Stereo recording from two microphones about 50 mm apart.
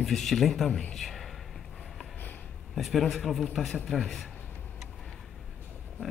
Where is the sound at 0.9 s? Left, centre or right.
Centre.